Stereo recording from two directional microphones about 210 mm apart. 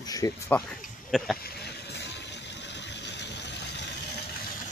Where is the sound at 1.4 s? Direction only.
50° left (ahead or behind).